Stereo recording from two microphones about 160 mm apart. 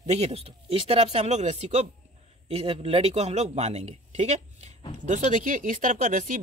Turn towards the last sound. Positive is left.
turn(degrees=-55)  # may be behind; listen again after turning